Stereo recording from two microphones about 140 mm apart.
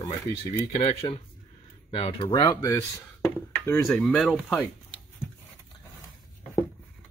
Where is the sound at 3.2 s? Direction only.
5° left (ahead or behind).